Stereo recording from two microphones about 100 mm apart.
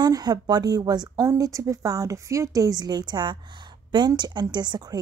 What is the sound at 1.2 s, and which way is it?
A woman's voice, 35° right (ahead or behind).